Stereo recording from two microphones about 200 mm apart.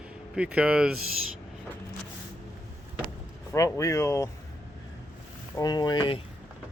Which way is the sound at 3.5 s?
15° left (ahead or behind).